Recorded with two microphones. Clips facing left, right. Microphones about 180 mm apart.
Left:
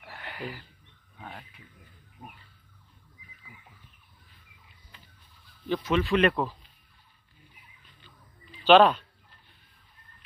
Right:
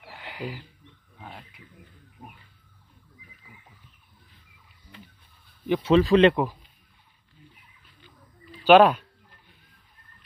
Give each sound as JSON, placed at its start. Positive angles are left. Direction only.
{"t": 0.0, "sound": "a sound", "side_deg": -15}
{"t": 1.1, "sound": "wild animals", "side_deg": 0}
{"t": 5.7, "sound": "speech", "side_deg": -30}
{"t": 6.3, "sound": "speech", "side_deg": -15}
{"t": 8.5, "sound": "speech", "side_deg": -10}